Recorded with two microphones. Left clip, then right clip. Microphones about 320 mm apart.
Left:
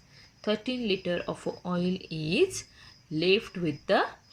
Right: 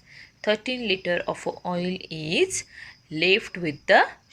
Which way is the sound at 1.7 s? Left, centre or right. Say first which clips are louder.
Right 3 dB; right.